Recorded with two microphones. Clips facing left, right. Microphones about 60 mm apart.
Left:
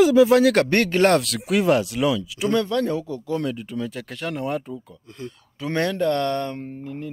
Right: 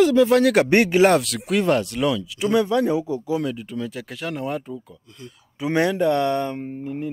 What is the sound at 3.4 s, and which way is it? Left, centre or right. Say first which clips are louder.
Speech: even; centre.